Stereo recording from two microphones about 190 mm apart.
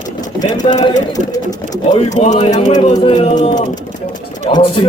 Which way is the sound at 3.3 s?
40° left (ahead or behind).